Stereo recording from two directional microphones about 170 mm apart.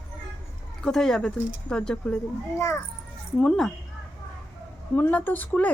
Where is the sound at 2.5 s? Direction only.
15° left (ahead or behind).